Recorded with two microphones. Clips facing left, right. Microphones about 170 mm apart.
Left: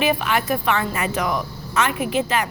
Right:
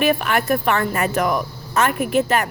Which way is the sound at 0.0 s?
55° right (ahead or behind).